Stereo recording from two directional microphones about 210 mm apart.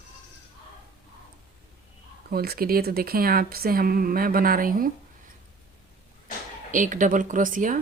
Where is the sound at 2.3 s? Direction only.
45° right (ahead or behind).